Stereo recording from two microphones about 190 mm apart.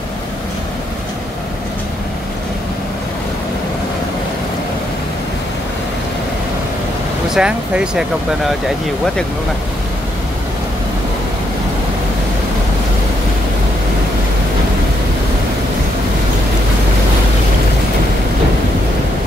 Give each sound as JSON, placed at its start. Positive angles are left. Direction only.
{"t": 7.2, "sound": "speech", "side_deg": -5}